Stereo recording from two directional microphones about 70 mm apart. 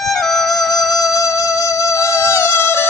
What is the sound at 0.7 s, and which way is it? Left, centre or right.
Music, left.